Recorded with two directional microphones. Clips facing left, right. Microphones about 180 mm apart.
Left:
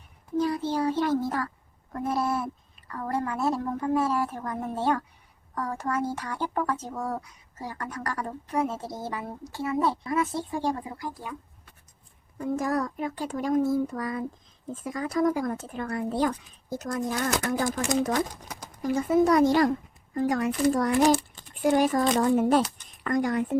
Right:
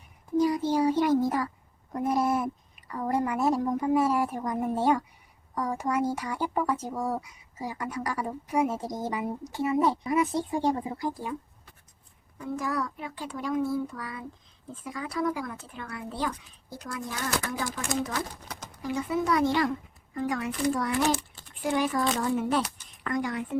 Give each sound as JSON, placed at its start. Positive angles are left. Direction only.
{"t": 0.3, "sound": "speech", "side_deg": -15}
{"t": 12.4, "sound": "speech", "side_deg": 45}